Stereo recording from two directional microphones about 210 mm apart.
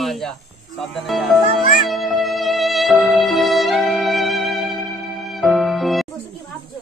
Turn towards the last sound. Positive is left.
turn(degrees=0)  # may be behind; listen again after turning